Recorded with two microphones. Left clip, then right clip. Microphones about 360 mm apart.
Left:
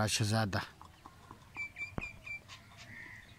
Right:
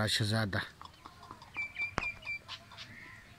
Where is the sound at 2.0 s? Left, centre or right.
Right.